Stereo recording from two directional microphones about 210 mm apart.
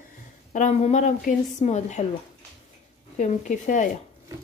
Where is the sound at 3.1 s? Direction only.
35° left (ahead or behind).